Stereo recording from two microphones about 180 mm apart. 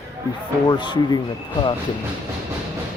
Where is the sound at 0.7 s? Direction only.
25° left (ahead or behind).